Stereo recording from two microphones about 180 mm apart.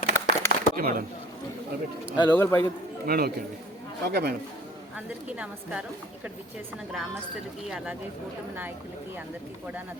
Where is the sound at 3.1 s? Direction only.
60° right (ahead or behind).